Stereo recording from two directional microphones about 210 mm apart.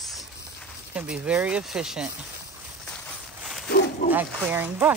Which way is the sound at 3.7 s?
50° left (ahead or behind).